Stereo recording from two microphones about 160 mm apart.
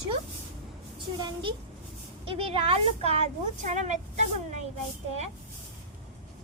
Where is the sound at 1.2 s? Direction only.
30° right (ahead or behind); by 3.9 s 45° right (ahead or behind).